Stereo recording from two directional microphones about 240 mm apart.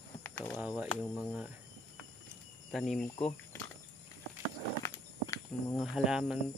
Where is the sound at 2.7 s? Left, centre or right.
Centre.